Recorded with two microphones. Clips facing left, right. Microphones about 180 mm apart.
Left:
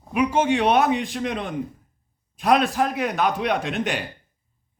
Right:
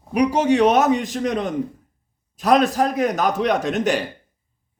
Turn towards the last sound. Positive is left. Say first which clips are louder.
# right 5 dB
turn(degrees=-40)  # may be behind; listen again after turning